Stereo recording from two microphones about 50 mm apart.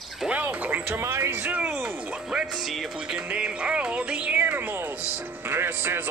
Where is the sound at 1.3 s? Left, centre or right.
Right.